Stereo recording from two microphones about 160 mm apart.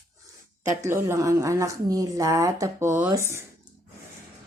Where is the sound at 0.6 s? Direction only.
15° right (ahead or behind).